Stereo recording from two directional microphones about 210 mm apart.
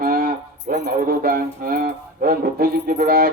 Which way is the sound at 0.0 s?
45° right (ahead or behind).